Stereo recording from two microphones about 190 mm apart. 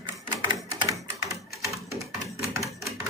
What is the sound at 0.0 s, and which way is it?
Typewriter, 20° right (ahead or behind).